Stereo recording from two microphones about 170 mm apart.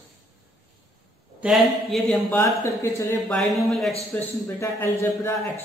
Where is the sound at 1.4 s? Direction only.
Centre (ahead or behind).